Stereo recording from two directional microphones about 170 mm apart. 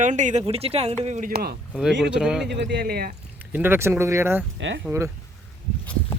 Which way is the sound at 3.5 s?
10° right (ahead or behind).